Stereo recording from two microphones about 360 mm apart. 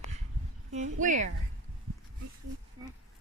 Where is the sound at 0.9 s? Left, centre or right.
Right.